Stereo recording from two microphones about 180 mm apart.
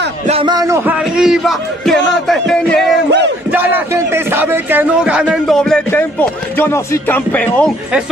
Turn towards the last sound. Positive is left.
turn(degrees=10)  # may be behind; listen again after turning